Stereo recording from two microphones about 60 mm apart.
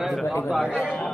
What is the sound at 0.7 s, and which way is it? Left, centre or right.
Speech, left.